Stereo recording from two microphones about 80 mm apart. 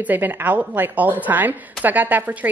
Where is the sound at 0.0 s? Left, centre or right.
Right.